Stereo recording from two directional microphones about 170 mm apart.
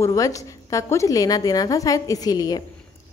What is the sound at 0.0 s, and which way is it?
A woman's voice, 20° left (ahead or behind).